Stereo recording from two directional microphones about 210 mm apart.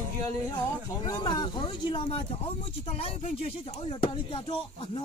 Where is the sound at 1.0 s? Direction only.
20° left (ahead or behind).